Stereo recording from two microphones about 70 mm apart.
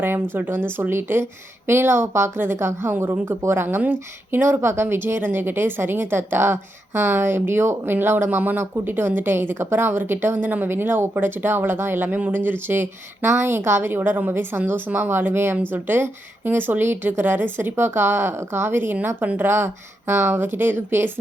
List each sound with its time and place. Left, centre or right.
0.0 s a woman's voice: right